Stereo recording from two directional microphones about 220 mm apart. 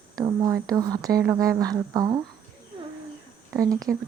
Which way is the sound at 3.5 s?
15° right (ahead or behind).